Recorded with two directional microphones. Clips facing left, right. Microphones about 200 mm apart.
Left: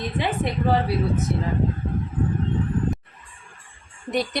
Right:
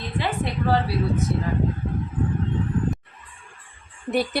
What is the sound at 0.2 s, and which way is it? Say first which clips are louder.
Speech: even; 20° left (ahead or behind).